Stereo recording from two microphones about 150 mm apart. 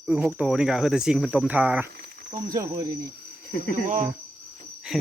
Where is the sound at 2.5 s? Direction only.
25° right (ahead or behind).